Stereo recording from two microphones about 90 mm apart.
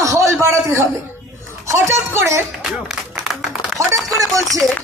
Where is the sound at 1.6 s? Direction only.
35° right (ahead or behind).